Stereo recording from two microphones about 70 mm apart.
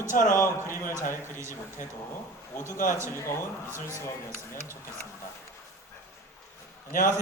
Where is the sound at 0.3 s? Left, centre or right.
Left.